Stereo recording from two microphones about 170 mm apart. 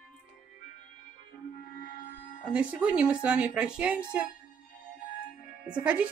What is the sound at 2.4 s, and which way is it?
Speech, 5° right (ahead or behind).